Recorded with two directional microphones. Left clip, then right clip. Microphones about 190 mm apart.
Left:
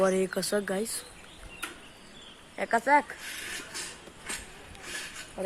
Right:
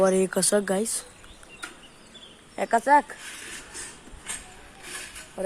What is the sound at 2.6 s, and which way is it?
Speech, 35° right (ahead or behind).